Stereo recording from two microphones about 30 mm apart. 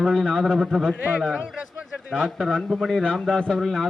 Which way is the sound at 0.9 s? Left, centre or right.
Right.